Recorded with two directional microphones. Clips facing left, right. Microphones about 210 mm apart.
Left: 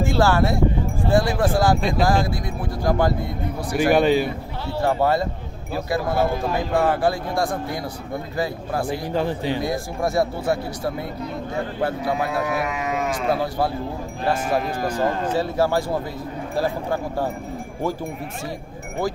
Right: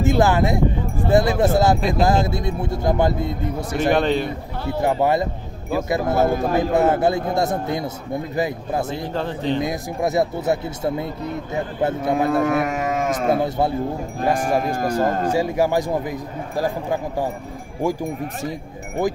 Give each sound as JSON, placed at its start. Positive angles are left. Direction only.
{"t": 0.0, "sound": "speech", "side_deg": -20}
{"t": 1.8, "sound": "speech", "side_deg": 0}
{"t": 2.0, "sound": "a man's voice", "side_deg": -25}
{"t": 3.9, "sound": "speech", "side_deg": 5}
{"t": 4.6, "sound": "a man's voice", "side_deg": -15}
{"t": 9.1, "sound": "speech", "side_deg": 10}
{"t": 9.6, "sound": "a man's voice", "side_deg": -20}
{"t": 12.3, "sound": "speech", "side_deg": -50}
{"t": 13.4, "sound": "a man's voice", "side_deg": -20}
{"t": 14.6, "sound": "speech", "side_deg": -45}
{"t": 15.3, "sound": "speech", "side_deg": -15}